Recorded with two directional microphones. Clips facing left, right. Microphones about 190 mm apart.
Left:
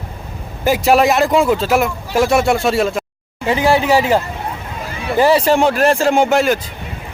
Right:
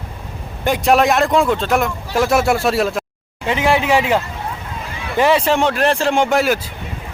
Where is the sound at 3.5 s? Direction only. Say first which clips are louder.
Left 2 dB; 35° left (ahead or behind).